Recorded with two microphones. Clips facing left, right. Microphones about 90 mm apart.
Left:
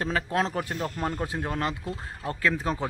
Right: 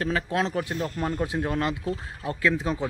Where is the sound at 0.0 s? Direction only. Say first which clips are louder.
Right 1 dB; 35° left (ahead or behind).